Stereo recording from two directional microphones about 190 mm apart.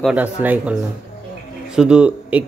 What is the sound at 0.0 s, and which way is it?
Speech, 10° right (ahead or behind).